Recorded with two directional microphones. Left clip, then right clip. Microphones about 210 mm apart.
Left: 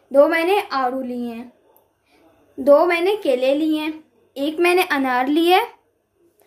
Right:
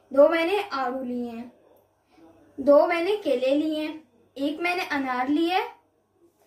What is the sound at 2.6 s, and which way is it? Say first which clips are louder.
A woman's voice: left 5 dB; 55° left (ahead or behind).